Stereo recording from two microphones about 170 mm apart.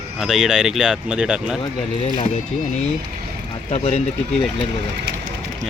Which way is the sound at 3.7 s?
40° left (ahead or behind).